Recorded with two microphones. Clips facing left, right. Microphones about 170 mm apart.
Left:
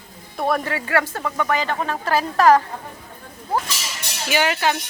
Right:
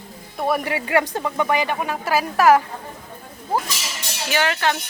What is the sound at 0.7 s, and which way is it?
Speech, 15° right (ahead or behind).